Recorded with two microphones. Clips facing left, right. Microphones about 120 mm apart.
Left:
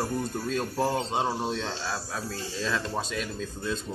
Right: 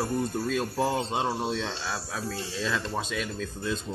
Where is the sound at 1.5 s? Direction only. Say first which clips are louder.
Right 1 dB; 25° left (ahead or behind).